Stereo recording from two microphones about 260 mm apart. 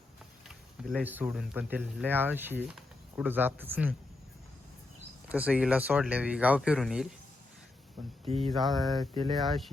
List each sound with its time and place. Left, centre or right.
0.4 s speech: centre
5.3 s speech: centre
8.4 s speech: centre